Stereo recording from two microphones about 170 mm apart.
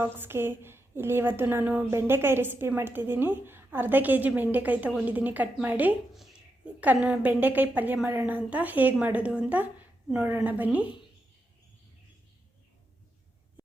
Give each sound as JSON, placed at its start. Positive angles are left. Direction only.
{"t": 0.0, "sound": "a woman's voice", "side_deg": -15}